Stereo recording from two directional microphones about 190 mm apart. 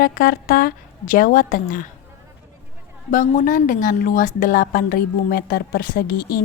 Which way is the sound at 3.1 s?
45° left (ahead or behind).